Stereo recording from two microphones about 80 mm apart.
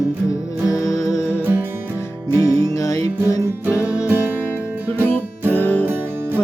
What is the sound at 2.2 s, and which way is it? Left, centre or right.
Music, left.